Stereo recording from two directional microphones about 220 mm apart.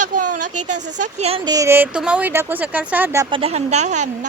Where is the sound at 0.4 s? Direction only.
90° right.